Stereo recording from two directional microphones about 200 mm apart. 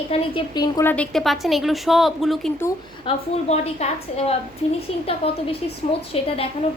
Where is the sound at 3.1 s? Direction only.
30° left (ahead or behind).